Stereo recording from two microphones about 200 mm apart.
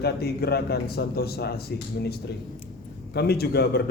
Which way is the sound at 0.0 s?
55° left (ahead or behind).